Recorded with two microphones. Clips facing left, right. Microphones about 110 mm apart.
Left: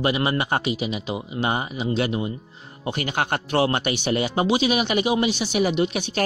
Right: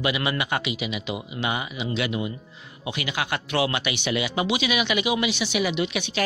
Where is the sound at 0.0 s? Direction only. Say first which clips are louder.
Left 3 dB; 35° left (ahead or behind).